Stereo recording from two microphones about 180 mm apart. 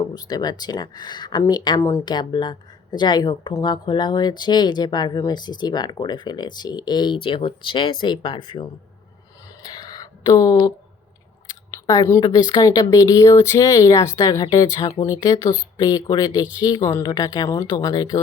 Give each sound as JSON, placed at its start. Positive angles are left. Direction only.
{"t": 0.1, "sound": "speech", "side_deg": 20}
{"t": 9.7, "sound": "a sound", "side_deg": 20}
{"t": 11.7, "sound": "speech", "side_deg": 20}